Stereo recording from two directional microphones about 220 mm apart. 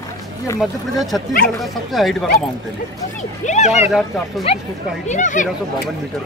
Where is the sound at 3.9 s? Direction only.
Centre (ahead or behind).